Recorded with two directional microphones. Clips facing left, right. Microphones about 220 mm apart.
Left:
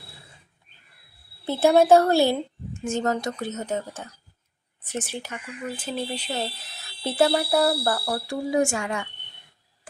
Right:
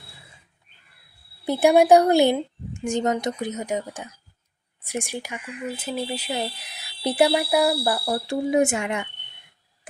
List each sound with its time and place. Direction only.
1.5 s speech: 15° right (ahead or behind)